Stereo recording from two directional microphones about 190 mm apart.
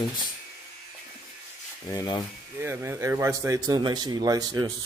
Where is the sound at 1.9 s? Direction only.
20° left (ahead or behind).